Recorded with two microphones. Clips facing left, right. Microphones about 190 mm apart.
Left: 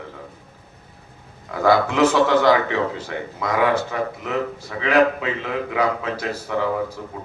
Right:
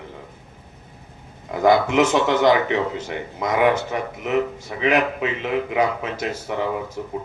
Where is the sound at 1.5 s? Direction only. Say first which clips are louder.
Right 1 dB; 20° right (ahead or behind).